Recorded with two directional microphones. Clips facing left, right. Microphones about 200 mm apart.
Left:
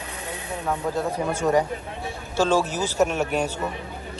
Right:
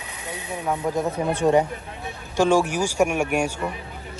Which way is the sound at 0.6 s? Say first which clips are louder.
Right 2 dB; 10° right (ahead or behind).